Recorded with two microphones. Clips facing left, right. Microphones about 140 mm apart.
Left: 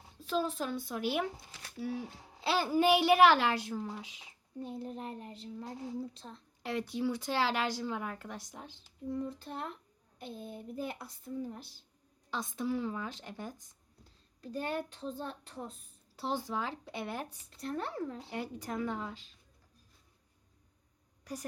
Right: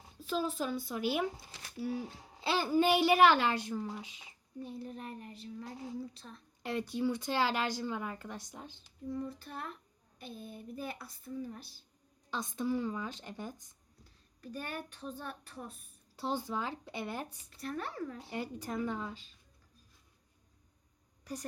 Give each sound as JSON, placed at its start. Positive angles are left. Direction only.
{"t": 0.2, "sound": "a child's voice", "side_deg": 0}
{"t": 4.6, "sound": "a woman's voice", "side_deg": 25}
{"t": 6.6, "sound": "a child's voice", "side_deg": 0}
{"t": 9.2, "sound": "a woman's voice", "side_deg": 25}
{"t": 12.3, "sound": "a child's voice", "side_deg": 0}
{"t": 14.4, "sound": "a woman's voice", "side_deg": 25}
{"t": 16.1, "sound": "a child's voice", "side_deg": 0}
{"t": 17.6, "sound": "a woman's voice", "side_deg": 25}
{"t": 18.3, "sound": "a child's voice", "side_deg": 0}